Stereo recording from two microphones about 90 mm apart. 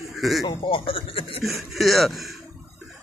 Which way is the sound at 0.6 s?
70° left (ahead or behind).